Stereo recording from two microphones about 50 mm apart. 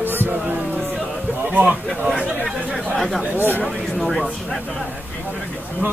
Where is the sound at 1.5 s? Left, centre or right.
Right.